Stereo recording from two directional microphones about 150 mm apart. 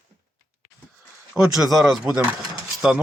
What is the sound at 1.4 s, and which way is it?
Speech, 5° right (ahead or behind).